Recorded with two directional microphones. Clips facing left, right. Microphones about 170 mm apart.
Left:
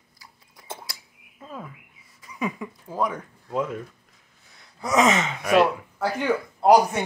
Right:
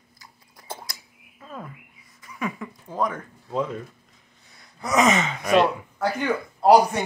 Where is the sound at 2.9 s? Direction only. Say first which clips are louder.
Even; 10° left (ahead or behind).